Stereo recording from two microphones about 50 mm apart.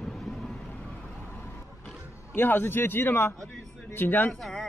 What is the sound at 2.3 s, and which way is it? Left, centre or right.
A man's voice, left.